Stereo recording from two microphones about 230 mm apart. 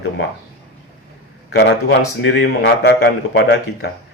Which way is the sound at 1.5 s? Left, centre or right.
Left.